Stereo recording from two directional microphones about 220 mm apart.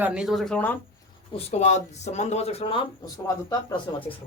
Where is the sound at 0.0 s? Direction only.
5° right (ahead or behind).